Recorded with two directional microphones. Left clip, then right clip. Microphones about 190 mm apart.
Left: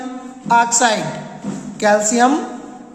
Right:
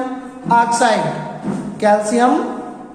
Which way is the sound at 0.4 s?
40° left (ahead or behind).